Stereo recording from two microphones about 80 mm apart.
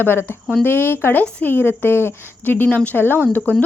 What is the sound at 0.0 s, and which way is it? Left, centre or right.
A woman's voice, left.